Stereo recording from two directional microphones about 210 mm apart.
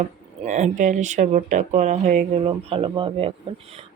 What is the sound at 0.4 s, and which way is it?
Speech, 35° right (ahead or behind).